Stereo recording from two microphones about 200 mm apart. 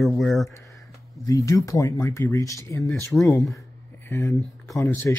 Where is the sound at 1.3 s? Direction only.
15° left (ahead or behind).